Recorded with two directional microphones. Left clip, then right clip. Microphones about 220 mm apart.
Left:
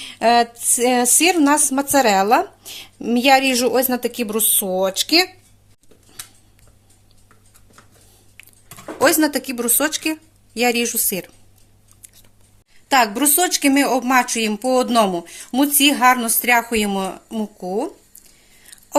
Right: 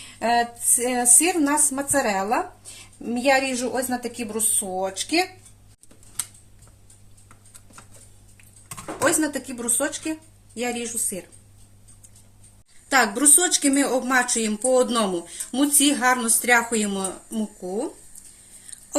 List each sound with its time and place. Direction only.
0.2 s a woman's voice: 40° left (ahead or behind)
9.0 s a woman's voice: 45° left (ahead or behind)
12.9 s a woman's voice: 40° left (ahead or behind)